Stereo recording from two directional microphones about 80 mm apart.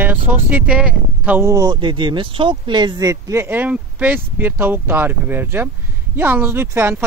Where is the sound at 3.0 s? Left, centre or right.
Right.